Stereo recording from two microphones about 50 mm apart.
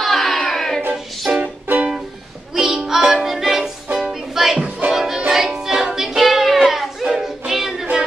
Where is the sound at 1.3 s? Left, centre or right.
Right.